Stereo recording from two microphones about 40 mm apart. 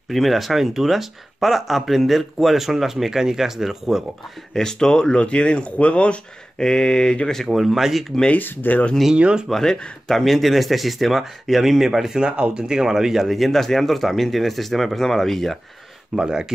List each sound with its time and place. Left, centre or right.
0.1 s speech: centre
4.6 s speech: centre
6.6 s speech: centre
7.4 s speech: centre
8.4 s speech: left
9.1 s speech: right
9.5 s speech: centre
12.2 s speech: right; by 15.6 s centre
16.2 s speech: centre